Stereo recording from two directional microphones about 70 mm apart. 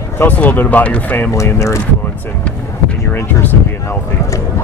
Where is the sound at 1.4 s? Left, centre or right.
Left.